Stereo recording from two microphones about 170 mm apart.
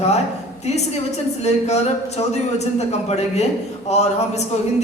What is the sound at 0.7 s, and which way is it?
A woman's voice, 40° left (ahead or behind).